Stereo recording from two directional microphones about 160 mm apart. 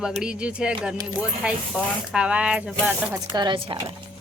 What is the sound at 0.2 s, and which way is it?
Speech, 5° right (ahead or behind).